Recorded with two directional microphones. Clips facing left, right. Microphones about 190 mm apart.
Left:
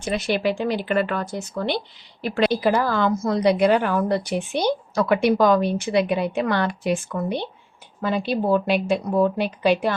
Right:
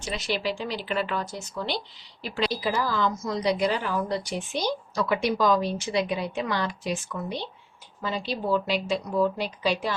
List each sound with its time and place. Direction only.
0.0 s speech: 55° left (ahead or behind)